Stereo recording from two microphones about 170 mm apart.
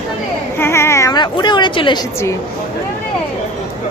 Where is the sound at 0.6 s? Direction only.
15° left (ahead or behind).